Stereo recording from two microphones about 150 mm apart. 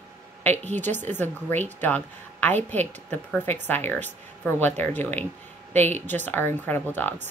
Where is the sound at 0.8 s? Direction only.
55° right (ahead or behind).